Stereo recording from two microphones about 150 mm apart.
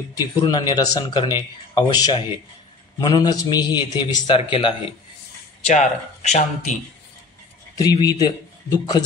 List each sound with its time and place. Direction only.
0.1 s speech: 25° left (ahead or behind)
5.7 s speech: 50° left (ahead or behind)
7.7 s a man's voice: 25° left (ahead or behind)